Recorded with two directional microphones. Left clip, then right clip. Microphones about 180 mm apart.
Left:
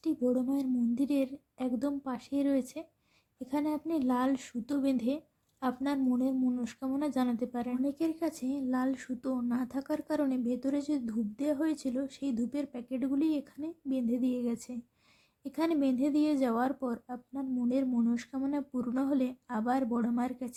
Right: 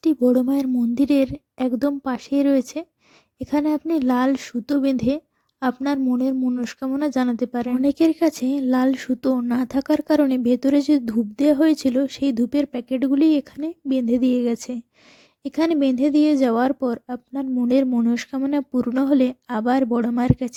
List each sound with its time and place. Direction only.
0.0 s speech: 55° right (ahead or behind)